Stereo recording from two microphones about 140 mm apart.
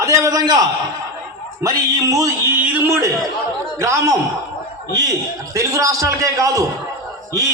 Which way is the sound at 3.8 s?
20° right (ahead or behind).